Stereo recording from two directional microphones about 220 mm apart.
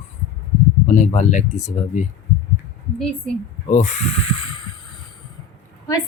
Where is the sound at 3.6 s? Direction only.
35° left (ahead or behind).